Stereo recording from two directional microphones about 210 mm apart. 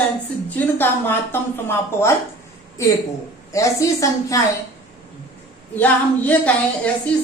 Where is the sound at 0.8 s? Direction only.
10° left (ahead or behind).